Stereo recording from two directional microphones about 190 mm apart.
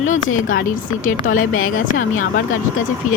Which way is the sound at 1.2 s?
90° left.